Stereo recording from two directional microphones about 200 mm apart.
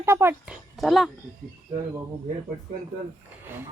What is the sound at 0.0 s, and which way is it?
Speech, 10° right (ahead or behind).